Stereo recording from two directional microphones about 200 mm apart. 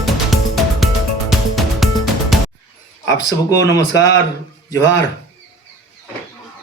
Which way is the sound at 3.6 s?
15° left (ahead or behind).